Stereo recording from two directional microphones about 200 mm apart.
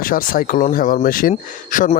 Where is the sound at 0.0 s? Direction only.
45° left (ahead or behind).